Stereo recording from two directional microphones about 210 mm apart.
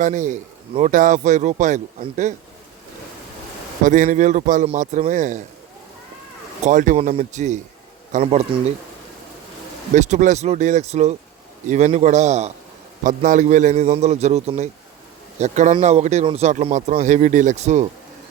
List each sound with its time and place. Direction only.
0.0 s a man's voice: 35° right (ahead or behind)
3.8 s a man's voice: 35° right (ahead or behind)
6.7 s a man's voice: 35° right (ahead or behind)
9.9 s a man's voice: 35° right (ahead or behind)